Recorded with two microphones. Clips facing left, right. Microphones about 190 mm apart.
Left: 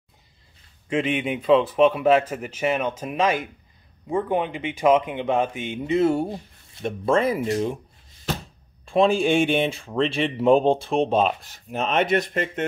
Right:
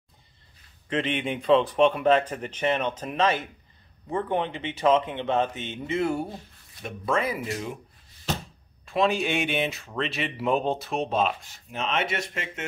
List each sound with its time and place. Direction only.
0.8 s speech: 10° left (ahead or behind); by 7.2 s 30° left (ahead or behind)
8.8 s speech: 30° left (ahead or behind)
11.7 s speech: 40° left (ahead or behind)